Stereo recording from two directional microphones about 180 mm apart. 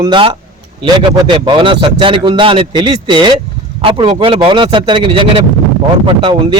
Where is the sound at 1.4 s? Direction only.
25° right (ahead or behind).